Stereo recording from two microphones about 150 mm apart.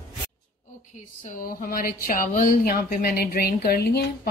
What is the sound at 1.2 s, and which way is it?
Speech, 70° left (ahead or behind).